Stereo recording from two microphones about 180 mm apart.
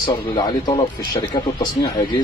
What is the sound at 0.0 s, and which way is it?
Speech, 25° left (ahead or behind).